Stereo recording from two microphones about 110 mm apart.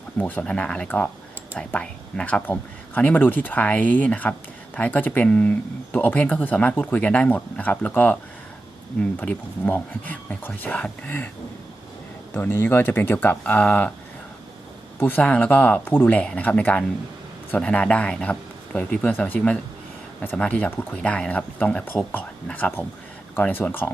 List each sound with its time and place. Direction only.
0.2 s speech: 15° left (ahead or behind)
12.3 s speech: 20° left (ahead or behind)
14.9 s speech: 15° left (ahead or behind)